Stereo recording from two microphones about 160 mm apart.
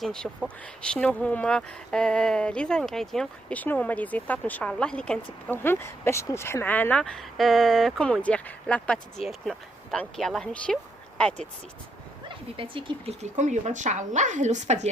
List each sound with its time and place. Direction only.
0.0 s a woman's voice: 5° left (ahead or behind)
12.5 s speech: 30° right (ahead or behind)
13.2 s speech: 45° right (ahead or behind)